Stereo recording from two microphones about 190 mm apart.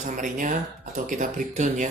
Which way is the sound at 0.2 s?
40° right (ahead or behind).